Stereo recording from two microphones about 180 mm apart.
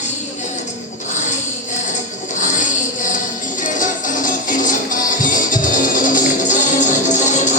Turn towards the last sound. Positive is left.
turn(degrees=45)  # may be behind; listen again after turning